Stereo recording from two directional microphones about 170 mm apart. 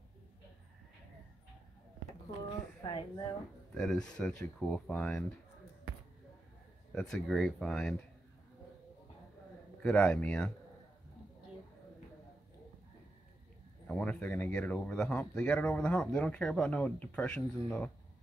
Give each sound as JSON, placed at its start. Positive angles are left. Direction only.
{"t": 2.8, "sound": "speech", "side_deg": 30}
{"t": 3.7, "sound": "speech", "side_deg": 5}
{"t": 7.0, "sound": "speech", "side_deg": 5}
{"t": 9.8, "sound": "speech", "side_deg": 5}
{"t": 13.8, "sound": "speech", "side_deg": 5}